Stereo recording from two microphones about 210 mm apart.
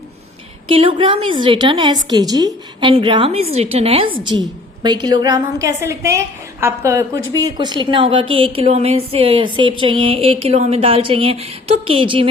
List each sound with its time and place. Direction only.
0.7 s speech: 25° right (ahead or behind)